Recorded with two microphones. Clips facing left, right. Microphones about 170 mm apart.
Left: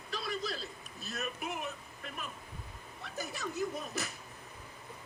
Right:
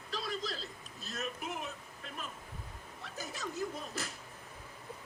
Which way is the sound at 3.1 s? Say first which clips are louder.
Left 3 dB; 70° left (ahead or behind).